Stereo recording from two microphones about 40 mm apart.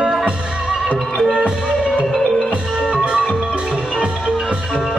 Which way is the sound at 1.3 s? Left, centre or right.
Right.